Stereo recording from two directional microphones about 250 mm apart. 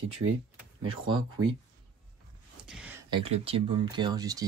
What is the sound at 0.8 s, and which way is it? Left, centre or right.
Speech, centre.